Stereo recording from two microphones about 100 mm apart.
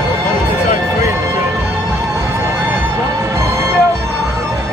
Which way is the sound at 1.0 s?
25° right (ahead or behind).